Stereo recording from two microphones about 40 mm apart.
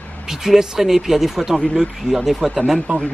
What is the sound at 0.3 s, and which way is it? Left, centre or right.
Speech, centre.